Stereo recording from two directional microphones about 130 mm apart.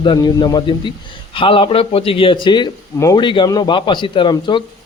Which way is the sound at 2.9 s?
25° left (ahead or behind).